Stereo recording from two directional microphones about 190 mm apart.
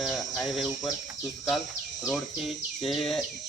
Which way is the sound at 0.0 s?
Centre (ahead or behind).